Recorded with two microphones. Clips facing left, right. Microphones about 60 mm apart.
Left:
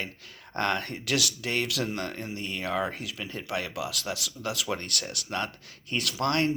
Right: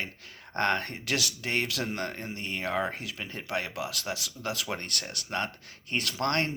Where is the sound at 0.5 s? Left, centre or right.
Right.